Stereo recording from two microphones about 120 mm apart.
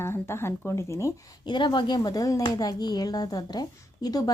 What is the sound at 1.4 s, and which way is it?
Speech, 40° left (ahead or behind).